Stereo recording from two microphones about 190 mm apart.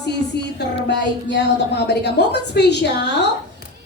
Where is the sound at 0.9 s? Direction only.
65° left (ahead or behind).